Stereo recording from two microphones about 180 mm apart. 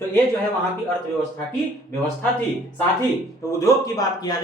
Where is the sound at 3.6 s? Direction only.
20° left (ahead or behind).